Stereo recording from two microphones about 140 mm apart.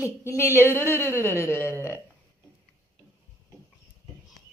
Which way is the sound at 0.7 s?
15° left (ahead or behind).